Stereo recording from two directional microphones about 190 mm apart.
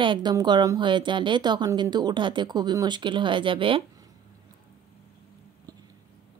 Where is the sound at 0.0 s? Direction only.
25° right (ahead or behind).